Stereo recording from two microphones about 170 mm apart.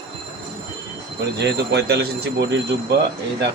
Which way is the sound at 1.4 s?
85° right.